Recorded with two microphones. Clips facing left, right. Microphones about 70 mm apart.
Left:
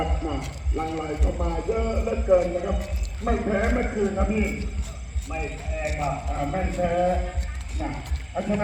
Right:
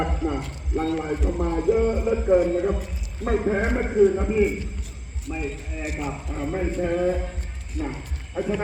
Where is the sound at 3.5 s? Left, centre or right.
Centre.